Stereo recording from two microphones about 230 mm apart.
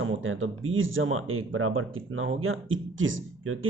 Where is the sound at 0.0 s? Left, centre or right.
Right.